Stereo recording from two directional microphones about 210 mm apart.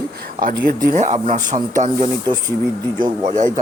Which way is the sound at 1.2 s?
35° right (ahead or behind).